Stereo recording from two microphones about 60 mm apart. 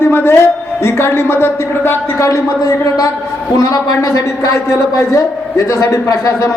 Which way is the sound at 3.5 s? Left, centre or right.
Left.